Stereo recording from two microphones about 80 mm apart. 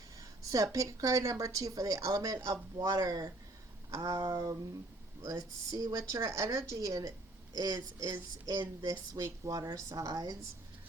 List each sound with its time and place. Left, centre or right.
0.2 s a woman's voice: right
4.3 s a sound: right
5.2 s a woman's voice: right
7.5 s a woman's voice: right
8.5 s a woman's voice: right